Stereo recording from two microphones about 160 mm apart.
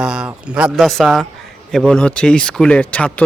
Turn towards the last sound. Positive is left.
turn(degrees=10)  # may be behind; listen again after turning